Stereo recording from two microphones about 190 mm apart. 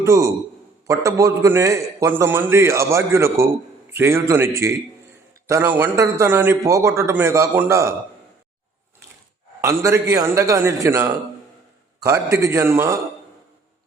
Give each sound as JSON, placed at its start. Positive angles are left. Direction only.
{"t": 0.0, "sound": "a man's voice", "side_deg": -15}
{"t": 9.6, "sound": "a man's voice", "side_deg": -15}